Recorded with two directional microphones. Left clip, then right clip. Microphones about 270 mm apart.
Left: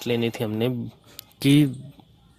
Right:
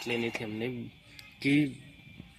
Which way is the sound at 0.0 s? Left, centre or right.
Left.